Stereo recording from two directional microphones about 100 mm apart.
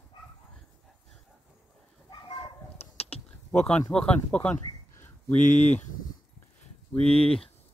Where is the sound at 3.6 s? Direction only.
10° left (ahead or behind).